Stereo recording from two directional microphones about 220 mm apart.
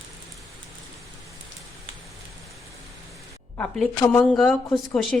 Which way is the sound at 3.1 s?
5° left (ahead or behind).